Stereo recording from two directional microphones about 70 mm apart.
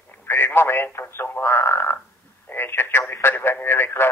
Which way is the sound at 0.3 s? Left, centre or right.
Left.